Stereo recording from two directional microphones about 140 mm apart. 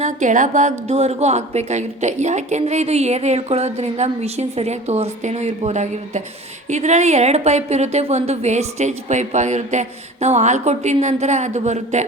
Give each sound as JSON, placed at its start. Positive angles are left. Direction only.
{"t": 0.0, "sound": "a woman's voice", "side_deg": -60}